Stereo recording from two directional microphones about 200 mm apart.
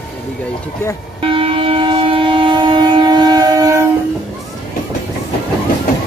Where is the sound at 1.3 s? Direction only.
25° right (ahead or behind).